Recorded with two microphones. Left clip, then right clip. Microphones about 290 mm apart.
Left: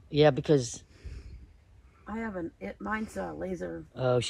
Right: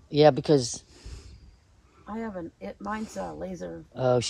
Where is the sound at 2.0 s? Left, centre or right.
Right.